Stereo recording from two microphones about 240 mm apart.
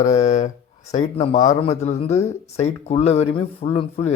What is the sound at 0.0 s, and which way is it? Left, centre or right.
Speech, left.